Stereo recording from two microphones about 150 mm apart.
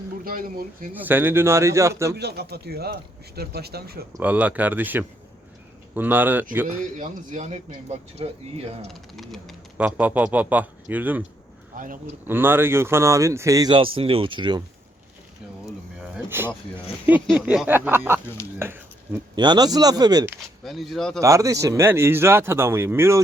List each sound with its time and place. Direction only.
0.3 s speech: 70° right (ahead or behind)
0.9 s speech: 15° right (ahead or behind)
2.1 s a man's voice: 90° right
4.2 s speech: 10° right (ahead or behind)
6.9 s speech: 55° right (ahead or behind)
8.9 s speech: centre (ahead or behind)
9.7 s speech: 10° right (ahead or behind)
11.7 s speech: 65° right (ahead or behind)
12.3 s speech: 15° right (ahead or behind); by 14.6 s 30° right (ahead or behind)
16.3 s speech: 15° right (ahead or behind)
18.6 s a sound: 15° right (ahead or behind)
19.4 s speech: 30° right (ahead or behind)
20.7 s speech: centre (ahead or behind)
21.2 s speech: 20° right (ahead or behind)